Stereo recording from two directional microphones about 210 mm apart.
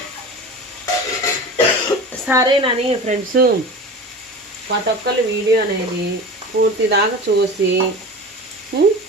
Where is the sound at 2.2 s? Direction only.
15° right (ahead or behind).